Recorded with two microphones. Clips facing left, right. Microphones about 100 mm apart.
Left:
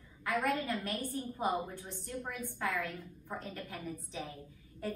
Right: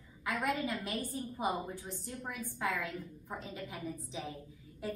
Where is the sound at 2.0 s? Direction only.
20° right (ahead or behind).